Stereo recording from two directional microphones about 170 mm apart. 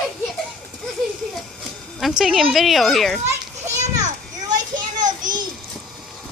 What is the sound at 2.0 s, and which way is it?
Speech, centre (ahead or behind).